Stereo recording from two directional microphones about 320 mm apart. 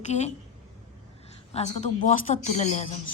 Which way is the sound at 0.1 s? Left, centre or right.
Left.